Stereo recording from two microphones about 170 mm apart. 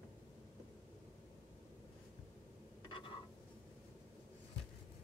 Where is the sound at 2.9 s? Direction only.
30° left (ahead or behind).